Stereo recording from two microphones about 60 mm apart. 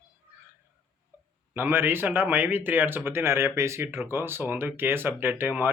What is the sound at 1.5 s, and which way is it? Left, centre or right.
Speech, right.